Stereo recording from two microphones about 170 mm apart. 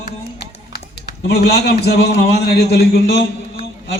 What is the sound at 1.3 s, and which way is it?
A man's voice, 70° left (ahead or behind).